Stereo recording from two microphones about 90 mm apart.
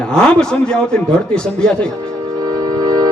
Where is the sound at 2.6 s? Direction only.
45° right (ahead or behind).